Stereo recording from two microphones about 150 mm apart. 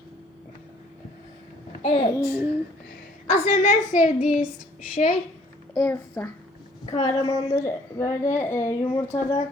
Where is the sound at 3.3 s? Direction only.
45° left (ahead or behind).